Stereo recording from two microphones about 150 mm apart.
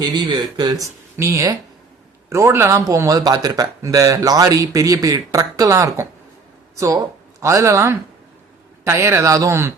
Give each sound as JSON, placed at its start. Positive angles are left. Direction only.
{"t": 0.0, "sound": "speech", "side_deg": -30}